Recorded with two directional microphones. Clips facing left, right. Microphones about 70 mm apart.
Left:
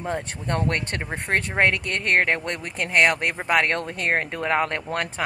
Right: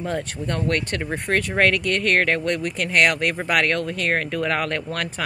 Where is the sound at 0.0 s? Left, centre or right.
Left.